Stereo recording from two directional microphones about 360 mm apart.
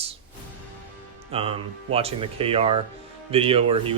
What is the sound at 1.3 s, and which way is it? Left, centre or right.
Speech, centre.